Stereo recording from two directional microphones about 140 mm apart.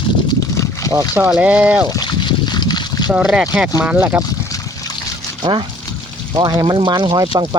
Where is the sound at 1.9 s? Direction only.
30° left (ahead or behind).